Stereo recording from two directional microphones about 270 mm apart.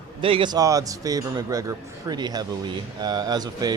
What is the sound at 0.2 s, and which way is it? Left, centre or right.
A man's voice, centre.